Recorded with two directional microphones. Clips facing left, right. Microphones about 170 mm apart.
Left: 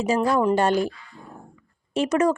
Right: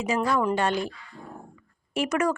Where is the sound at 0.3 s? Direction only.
35° left (ahead or behind).